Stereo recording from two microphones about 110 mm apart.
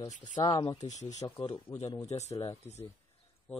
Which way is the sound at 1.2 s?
30° left (ahead or behind).